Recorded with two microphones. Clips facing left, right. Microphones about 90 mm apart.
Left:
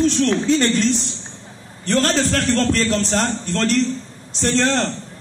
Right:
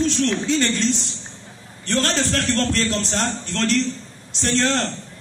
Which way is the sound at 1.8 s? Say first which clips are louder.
Left 4 dB; 35° left (ahead or behind).